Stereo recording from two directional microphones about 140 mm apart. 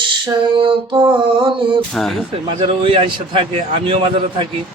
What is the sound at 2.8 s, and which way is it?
Music, 35° right (ahead or behind).